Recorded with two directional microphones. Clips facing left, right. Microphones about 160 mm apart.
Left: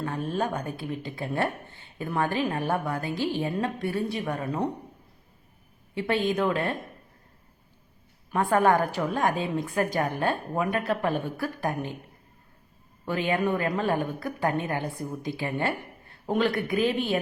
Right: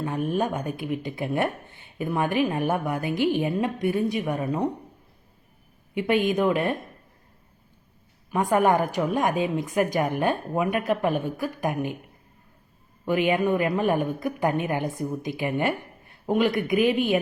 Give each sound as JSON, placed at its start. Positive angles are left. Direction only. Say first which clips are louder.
{"t": 0.0, "sound": "a woman's voice", "louder": "right 3 dB", "side_deg": -15}
{"t": 5.9, "sound": "a woman's voice", "louder": "right 3 dB", "side_deg": -15}
{"t": 8.3, "sound": "a woman's voice", "louder": "right 1 dB", "side_deg": -15}
{"t": 13.1, "sound": "a woman's voice", "louder": "right 4 dB", "side_deg": -15}